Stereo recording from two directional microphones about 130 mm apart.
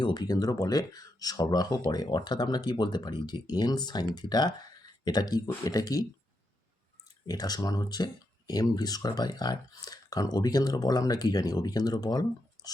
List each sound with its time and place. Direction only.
0.0 s speech: 35° left (ahead or behind)
7.3 s speech: 30° left (ahead or behind)